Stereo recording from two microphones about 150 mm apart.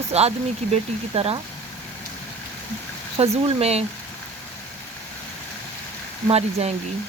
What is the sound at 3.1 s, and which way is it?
Speech, 40° right (ahead or behind).